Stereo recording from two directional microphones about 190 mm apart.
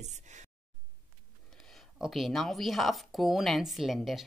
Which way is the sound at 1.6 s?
Centre (ahead or behind).